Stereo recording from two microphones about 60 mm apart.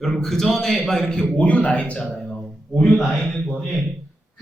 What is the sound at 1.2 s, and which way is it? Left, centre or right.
Speech, left.